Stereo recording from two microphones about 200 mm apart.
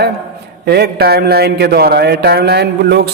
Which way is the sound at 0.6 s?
55° right (ahead or behind).